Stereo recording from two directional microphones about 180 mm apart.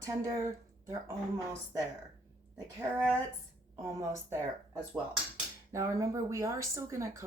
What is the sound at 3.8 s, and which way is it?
Speech, 15° right (ahead or behind).